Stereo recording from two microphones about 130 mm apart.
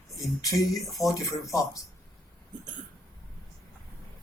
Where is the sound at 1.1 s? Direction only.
25° left (ahead or behind).